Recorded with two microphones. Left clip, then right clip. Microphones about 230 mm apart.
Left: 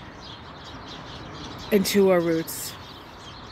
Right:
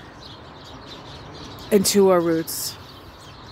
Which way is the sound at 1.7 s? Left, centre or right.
Centre.